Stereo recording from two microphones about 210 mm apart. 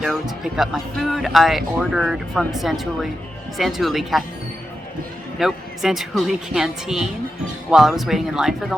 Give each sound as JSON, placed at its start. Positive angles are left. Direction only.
{"t": 0.0, "sound": "speech", "side_deg": 0}
{"t": 5.4, "sound": "speech", "side_deg": 0}